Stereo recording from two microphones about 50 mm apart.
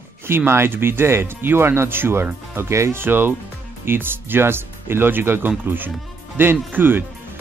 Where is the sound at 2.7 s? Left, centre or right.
Right.